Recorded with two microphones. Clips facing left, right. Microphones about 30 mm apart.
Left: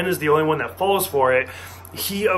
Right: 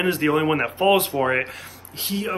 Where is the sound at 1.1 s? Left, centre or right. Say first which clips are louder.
Left 4 dB; centre.